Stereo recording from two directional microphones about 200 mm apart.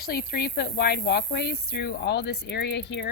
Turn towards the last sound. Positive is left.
turn(degrees=60)  # may be behind; listen again after turning